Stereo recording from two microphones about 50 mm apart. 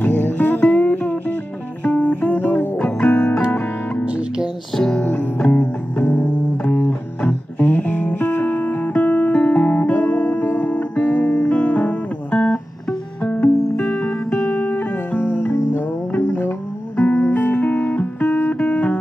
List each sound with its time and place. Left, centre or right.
0.0 s music: left
2.8 s music: left
4.7 s music: centre
5.0 s music: left
5.5 s music: left
6.6 s music: left
14.4 s music: left
16.2 s music: left
16.9 s music: left
18.6 s music: left